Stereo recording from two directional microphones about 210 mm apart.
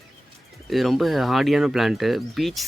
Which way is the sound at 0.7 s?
Centre (ahead or behind).